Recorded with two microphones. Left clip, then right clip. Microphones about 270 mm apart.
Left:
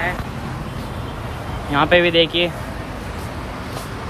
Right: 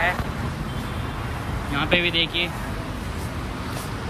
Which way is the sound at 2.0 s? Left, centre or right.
Centre.